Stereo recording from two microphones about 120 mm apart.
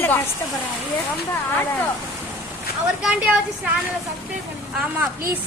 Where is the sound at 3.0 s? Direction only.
10° right (ahead or behind).